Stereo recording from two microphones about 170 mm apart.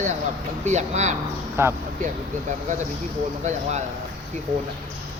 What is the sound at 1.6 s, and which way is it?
Speech, 15° right (ahead or behind).